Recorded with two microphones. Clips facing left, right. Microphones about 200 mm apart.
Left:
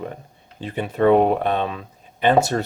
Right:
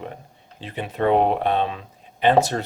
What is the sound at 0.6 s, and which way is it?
Speech, 45° left (ahead or behind).